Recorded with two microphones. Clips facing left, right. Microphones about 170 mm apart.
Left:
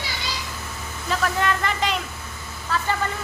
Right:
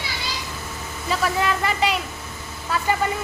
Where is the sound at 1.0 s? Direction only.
5° right (ahead or behind).